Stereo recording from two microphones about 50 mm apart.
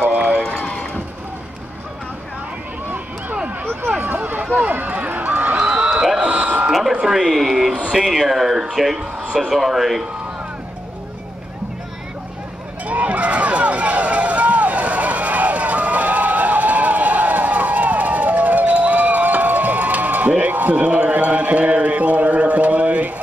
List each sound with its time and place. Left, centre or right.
0.0 s run: right
0.6 s run: centre
4.0 s a sound: right
4.6 s run: right
5.6 s a sound: centre
6.1 s buzzer: right
6.7 s a sound: centre
7.9 s speech: centre
12.8 s run: right